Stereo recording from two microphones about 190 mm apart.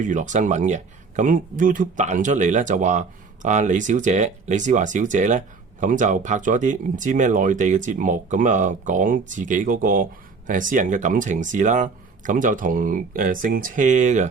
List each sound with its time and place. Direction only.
0.0 s speech: 40° right (ahead or behind)